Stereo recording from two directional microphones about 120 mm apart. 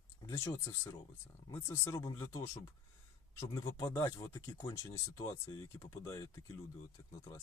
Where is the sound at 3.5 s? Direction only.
25° left (ahead or behind).